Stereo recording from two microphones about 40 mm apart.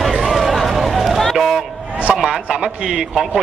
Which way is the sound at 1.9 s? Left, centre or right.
Right.